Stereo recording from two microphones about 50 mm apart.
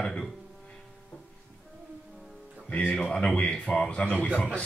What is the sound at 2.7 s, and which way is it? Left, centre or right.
A man's voice, left.